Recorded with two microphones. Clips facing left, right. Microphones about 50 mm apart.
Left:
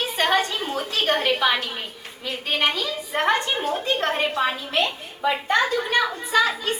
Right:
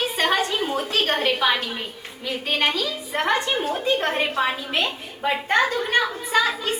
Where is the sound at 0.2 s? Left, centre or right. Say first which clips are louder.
Left 1 dB; centre.